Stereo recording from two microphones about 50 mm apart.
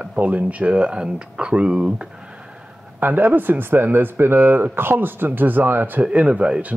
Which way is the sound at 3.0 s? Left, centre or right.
Right.